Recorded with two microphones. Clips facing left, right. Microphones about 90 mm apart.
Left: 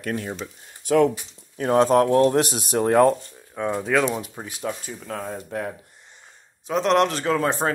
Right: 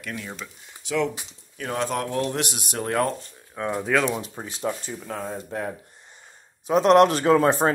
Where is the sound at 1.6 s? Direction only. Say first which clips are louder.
Left 10 dB; 35° left (ahead or behind).